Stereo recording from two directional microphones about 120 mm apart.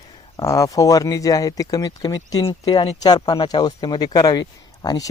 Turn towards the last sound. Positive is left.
turn(degrees=30)  # may be behind; listen again after turning